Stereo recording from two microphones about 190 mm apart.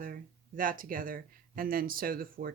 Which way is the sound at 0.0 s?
45° right (ahead or behind).